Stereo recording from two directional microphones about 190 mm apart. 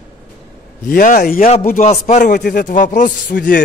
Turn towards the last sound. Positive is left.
turn(degrees=45)  # may be behind; listen again after turning